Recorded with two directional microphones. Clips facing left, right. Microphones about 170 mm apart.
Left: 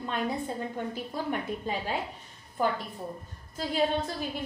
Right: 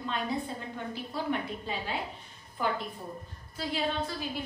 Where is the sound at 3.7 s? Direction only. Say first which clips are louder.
Left 4 dB; 45° left (ahead or behind).